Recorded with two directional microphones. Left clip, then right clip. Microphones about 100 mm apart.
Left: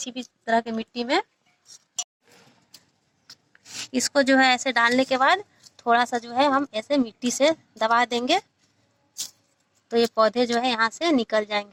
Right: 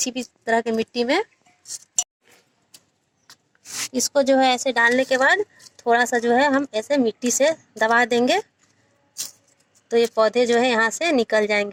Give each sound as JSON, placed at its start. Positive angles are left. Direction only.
{"t": 0.0, "sound": "speech", "side_deg": -30}
{"t": 0.5, "sound": "speech", "side_deg": -45}
{"t": 1.6, "sound": "a sound", "side_deg": -30}
{"t": 3.6, "sound": "a sound", "side_deg": 30}
{"t": 4.4, "sound": "speech", "side_deg": -30}
{"t": 9.9, "sound": "speech", "side_deg": -35}